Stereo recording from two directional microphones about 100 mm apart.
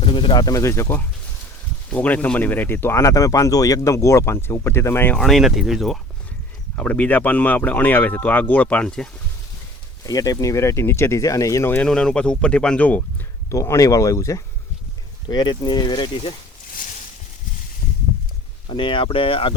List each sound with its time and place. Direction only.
0.0 s speech: 55° left (ahead or behind)
0.4 s speech: 30° left (ahead or behind)
1.9 s speech: 15° left (ahead or behind)
5.1 s speech: centre (ahead or behind)
6.7 s speech: 15° left (ahead or behind)
10.1 s speech: 35° left (ahead or behind)
11.9 s speech: 10° left (ahead or behind)
13.5 s speech: 35° left (ahead or behind)
15.3 s speech: 45° left (ahead or behind)
18.7 s speech: 55° left (ahead or behind)